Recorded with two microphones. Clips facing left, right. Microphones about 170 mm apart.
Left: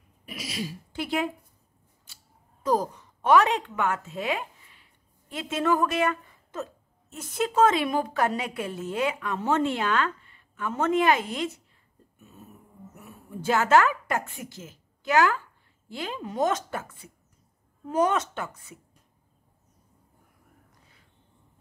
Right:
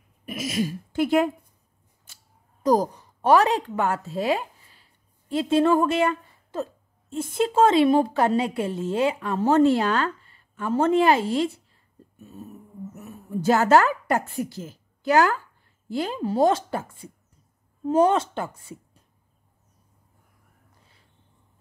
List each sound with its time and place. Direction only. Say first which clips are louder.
0.2 s a sound: right 8 dB; 50° right (ahead or behind)
2.6 s a woman's voice: right 5 dB; 40° right (ahead or behind)
12.9 s a woman's voice: right 8 dB; 40° right (ahead or behind)